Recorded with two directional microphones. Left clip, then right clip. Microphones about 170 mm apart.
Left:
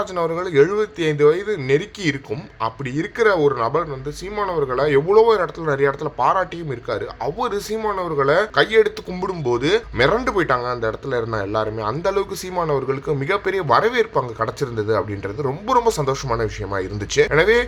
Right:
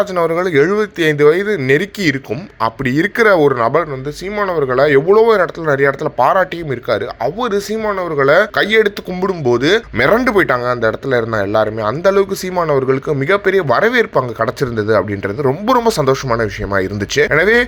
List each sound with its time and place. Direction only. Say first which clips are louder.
0.0 s speech: right 7 dB; 30° right (ahead or behind)